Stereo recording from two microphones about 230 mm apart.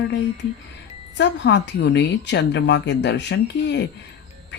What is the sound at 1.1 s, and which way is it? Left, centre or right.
Speech, left.